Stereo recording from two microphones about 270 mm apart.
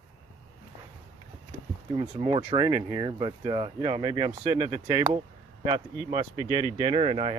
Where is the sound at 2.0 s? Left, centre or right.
Centre.